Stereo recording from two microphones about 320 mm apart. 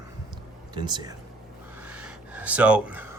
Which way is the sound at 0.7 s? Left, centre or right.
Centre.